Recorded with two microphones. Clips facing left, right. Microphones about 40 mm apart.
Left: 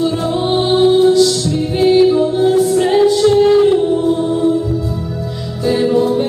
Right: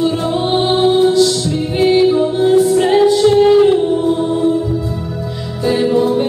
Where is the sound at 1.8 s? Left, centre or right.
Centre.